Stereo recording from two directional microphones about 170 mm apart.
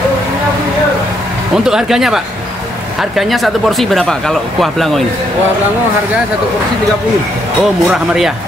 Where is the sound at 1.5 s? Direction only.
5° right (ahead or behind).